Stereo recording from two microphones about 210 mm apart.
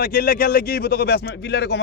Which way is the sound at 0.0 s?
45° left (ahead or behind).